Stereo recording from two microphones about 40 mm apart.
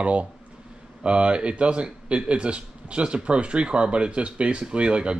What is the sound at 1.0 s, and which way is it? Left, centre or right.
Speech, right.